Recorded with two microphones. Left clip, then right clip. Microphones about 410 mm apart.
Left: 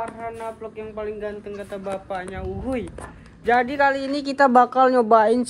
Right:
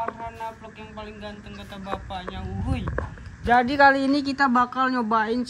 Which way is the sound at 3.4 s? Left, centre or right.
Centre.